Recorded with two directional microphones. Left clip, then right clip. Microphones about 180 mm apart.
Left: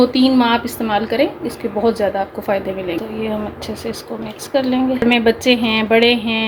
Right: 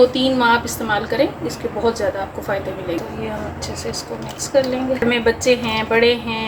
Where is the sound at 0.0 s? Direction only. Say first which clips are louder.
Even; 45° left (ahead or behind).